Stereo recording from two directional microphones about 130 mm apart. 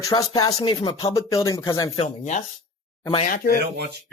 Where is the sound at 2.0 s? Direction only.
70° left (ahead or behind).